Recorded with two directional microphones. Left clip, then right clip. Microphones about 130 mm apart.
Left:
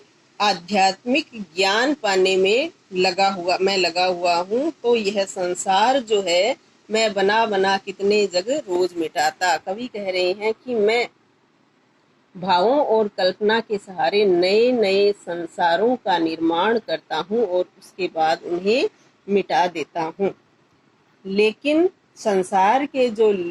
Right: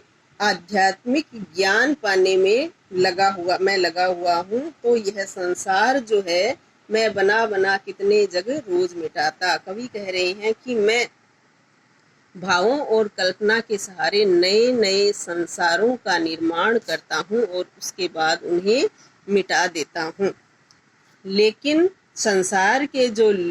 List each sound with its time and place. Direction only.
0.3 s a man's voice: 50° left (ahead or behind)
12.4 s a man's voice: 30° left (ahead or behind)